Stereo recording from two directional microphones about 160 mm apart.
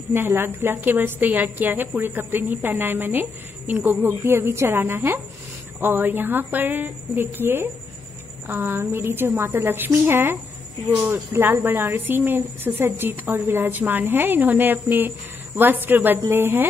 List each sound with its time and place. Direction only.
0.1 s a woman's voice: 15° right (ahead or behind)